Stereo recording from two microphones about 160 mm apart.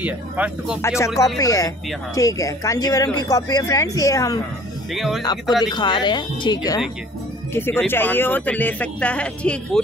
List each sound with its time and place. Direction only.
0.0 s speech: 10° right (ahead or behind)
0.8 s speech: 20° left (ahead or behind)
4.9 s speech: centre (ahead or behind)
5.7 s speech: 30° left (ahead or behind)
7.5 s speech: 15° left (ahead or behind)